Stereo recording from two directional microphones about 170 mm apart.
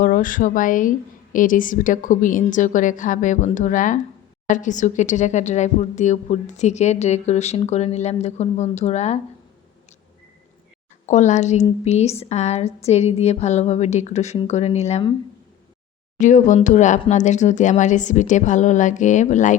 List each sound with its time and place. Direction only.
0.0 s speech: 55° left (ahead or behind)
11.0 s speech: 45° left (ahead or behind)
16.1 s speech: 45° left (ahead or behind)